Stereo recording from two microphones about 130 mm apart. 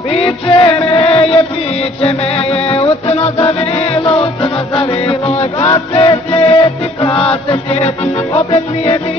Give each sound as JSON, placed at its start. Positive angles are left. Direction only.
{"t": 0.1, "sound": "music", "side_deg": 45}